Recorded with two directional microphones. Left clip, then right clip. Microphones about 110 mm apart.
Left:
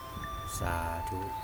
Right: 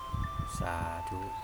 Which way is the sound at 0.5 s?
15° right (ahead or behind).